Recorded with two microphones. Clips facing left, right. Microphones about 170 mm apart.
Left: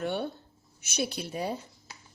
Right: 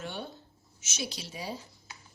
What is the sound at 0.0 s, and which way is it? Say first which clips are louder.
A woman's voice: left 8 dB; 55° left (ahead or behind).